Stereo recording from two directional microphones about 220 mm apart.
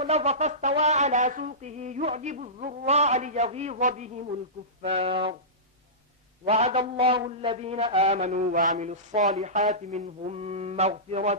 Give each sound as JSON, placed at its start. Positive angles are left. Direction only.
{"t": 0.0, "sound": "a sound", "side_deg": -30}
{"t": 4.8, "sound": "a man's voice", "side_deg": -25}
{"t": 6.4, "sound": "a man's voice", "side_deg": -30}